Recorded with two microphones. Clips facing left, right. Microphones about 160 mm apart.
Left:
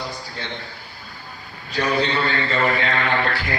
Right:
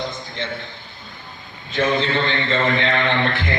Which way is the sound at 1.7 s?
25° right (ahead or behind).